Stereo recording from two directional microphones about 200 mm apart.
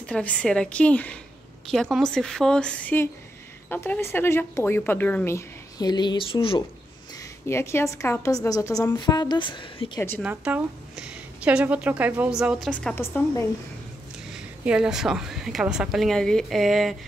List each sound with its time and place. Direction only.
0.0 s a woman's voice: 5° left (ahead or behind); by 6.6 s 25° left (ahead or behind)
7.4 s speech: 15° left (ahead or behind)
10.2 s a woman's voice: 5° right (ahead or behind); by 13.5 s 10° left (ahead or behind)
14.3 s a woman's voice: 5° right (ahead or behind)